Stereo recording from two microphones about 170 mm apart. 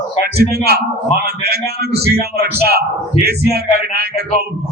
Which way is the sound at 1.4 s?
70° right (ahead or behind).